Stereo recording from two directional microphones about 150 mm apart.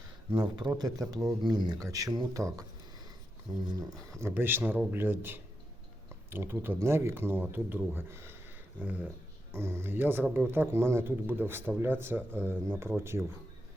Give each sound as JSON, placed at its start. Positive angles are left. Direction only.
{"t": 0.3, "sound": "speech", "side_deg": -30}
{"t": 3.7, "sound": "speech", "side_deg": -25}